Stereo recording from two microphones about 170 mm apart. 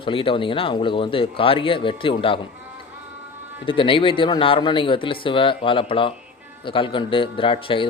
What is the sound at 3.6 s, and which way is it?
Speech, 30° left (ahead or behind).